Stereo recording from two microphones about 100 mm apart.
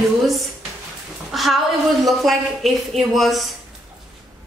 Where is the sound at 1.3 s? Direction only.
Centre (ahead or behind).